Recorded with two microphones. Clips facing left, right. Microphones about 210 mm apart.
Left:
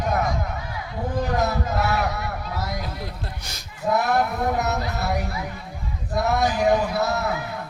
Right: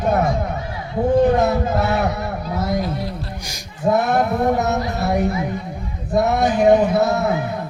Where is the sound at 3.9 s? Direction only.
25° right (ahead or behind).